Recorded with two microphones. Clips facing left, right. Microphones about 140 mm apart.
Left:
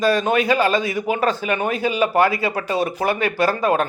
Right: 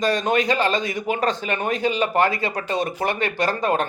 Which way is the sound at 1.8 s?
25° right (ahead or behind).